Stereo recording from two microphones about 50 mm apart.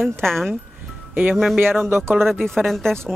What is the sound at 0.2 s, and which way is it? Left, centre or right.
Speech, centre.